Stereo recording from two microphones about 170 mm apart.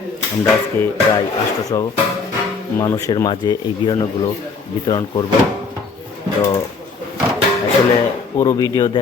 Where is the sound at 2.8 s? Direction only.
20° left (ahead or behind).